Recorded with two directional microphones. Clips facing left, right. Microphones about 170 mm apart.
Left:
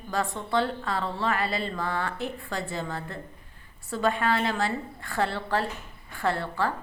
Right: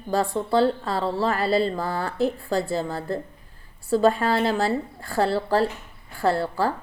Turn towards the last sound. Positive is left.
turn(degrees=-35)  # may be behind; listen again after turning